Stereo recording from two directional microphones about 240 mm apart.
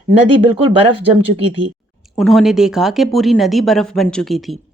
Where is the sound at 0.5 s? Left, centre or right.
Right.